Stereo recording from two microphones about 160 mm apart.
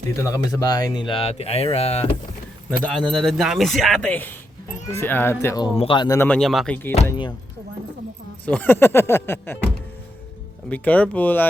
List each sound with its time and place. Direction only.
0.2 s speech: 20° left (ahead or behind); by 2.0 s 40° left (ahead or behind)
2.6 s speech: 5° left (ahead or behind)
5.6 s speech: 35° left (ahead or behind)
6.1 s speech: 10° left (ahead or behind)
8.4 s speech: 10° left (ahead or behind)
10.7 s speech: 10° left (ahead or behind)